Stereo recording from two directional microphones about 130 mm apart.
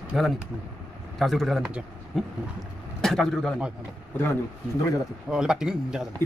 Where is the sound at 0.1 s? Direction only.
5° right (ahead or behind).